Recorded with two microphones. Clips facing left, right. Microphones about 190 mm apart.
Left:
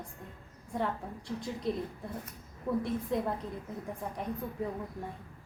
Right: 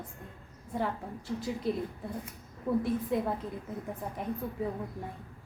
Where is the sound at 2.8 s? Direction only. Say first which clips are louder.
Right 2 dB; 5° right (ahead or behind).